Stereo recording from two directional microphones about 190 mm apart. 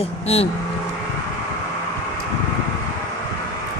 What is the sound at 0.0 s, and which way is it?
Speech, 30° left (ahead or behind).